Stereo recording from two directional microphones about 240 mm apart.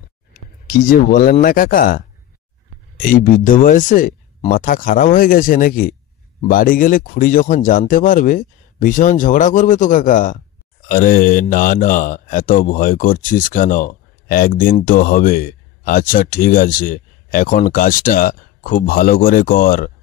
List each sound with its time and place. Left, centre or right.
0.7 s speech: left
3.1 s speech: left